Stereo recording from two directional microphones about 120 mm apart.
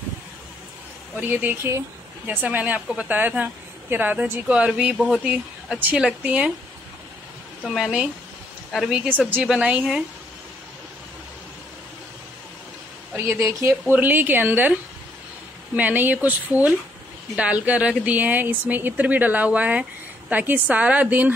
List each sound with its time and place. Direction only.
1.2 s speech: 15° right (ahead or behind)
7.6 s a woman's voice: 5° right (ahead or behind)
13.1 s speech: 20° right (ahead or behind)